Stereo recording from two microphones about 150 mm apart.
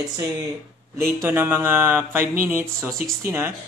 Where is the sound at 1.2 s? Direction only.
15° right (ahead or behind).